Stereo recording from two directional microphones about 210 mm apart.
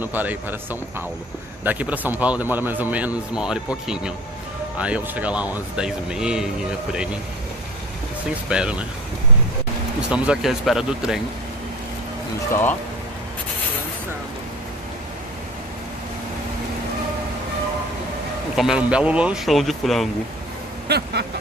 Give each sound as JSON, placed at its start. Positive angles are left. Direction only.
{"t": 0.0, "sound": "a man's voice", "side_deg": -10}
{"t": 8.5, "sound": "speech", "side_deg": -5}
{"t": 10.0, "sound": "speech", "side_deg": -5}
{"t": 18.6, "sound": "speech", "side_deg": -5}
{"t": 20.9, "sound": "vehicle", "side_deg": -50}